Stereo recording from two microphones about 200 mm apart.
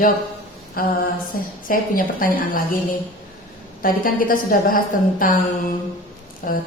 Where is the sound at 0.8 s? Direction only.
45° left (ahead or behind).